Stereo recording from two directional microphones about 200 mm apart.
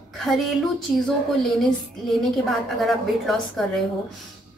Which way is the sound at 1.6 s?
Centre (ahead or behind).